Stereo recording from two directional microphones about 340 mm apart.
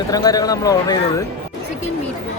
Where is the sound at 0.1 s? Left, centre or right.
Centre.